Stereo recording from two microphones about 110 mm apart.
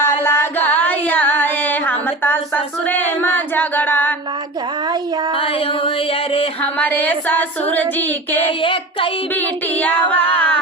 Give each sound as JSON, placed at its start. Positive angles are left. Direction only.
{"t": 0.0, "sound": "a sound", "side_deg": 20}
{"t": 2.8, "sound": "singing", "side_deg": 15}
{"t": 5.4, "sound": "music", "side_deg": 55}
{"t": 6.6, "sound": "child singing", "side_deg": 15}
{"t": 8.4, "sound": "child singing", "side_deg": 55}
{"t": 9.3, "sound": "child singing", "side_deg": 15}